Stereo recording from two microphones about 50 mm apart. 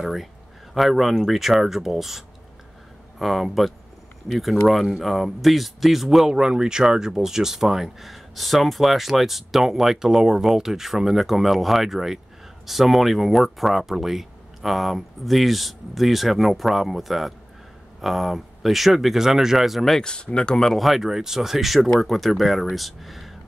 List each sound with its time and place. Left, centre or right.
0.0 s speech: centre
20.0 s speech: centre
20.7 s speech: centre